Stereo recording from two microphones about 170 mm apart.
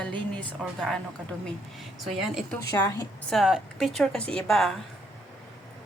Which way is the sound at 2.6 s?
20° left (ahead or behind).